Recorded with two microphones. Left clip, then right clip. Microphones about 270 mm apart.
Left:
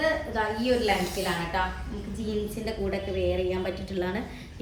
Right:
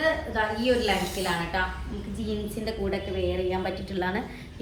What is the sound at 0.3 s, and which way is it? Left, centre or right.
A woman's voice, centre.